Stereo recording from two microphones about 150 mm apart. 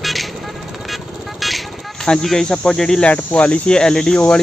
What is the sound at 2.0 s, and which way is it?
Speech, 5° left (ahead or behind).